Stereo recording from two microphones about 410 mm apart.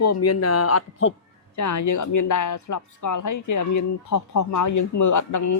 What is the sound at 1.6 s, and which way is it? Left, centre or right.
Speech, left.